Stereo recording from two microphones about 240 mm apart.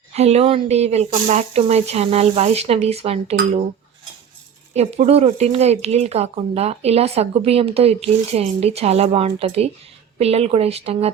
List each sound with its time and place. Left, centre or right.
0.1 s speech: right
4.7 s speech: right